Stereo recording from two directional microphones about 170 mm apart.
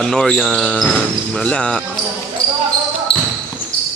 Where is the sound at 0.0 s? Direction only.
5° left (ahead or behind).